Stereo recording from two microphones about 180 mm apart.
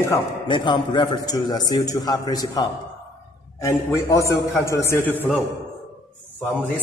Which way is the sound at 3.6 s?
15° left (ahead or behind).